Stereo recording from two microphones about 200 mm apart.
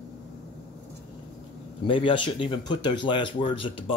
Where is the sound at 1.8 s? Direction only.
25° left (ahead or behind).